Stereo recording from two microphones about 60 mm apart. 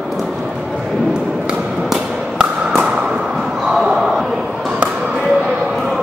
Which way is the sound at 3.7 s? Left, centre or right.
Centre.